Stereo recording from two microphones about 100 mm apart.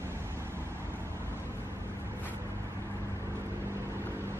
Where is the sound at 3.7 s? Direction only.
25° right (ahead or behind).